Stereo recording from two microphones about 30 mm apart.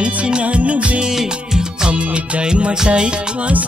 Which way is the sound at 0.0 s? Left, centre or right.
Right.